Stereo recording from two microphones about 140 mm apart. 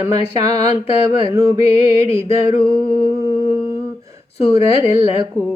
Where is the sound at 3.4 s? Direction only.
25° right (ahead or behind).